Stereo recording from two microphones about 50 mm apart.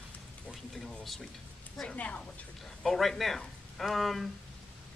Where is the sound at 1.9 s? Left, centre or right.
Left.